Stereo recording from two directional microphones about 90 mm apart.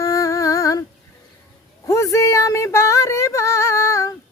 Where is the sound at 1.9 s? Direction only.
35° left (ahead or behind).